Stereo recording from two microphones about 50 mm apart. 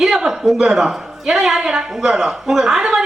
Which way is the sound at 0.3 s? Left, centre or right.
Centre.